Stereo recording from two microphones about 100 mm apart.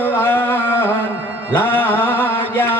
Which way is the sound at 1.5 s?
20° left (ahead or behind).